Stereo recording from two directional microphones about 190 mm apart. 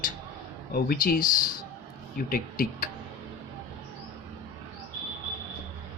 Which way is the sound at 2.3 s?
45° left (ahead or behind).